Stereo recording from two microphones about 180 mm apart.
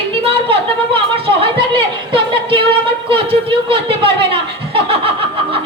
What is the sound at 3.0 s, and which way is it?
Chuckle, 30° right (ahead or behind).